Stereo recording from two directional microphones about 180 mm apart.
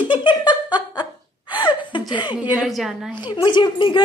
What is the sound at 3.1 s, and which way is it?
Speech, 25° left (ahead or behind).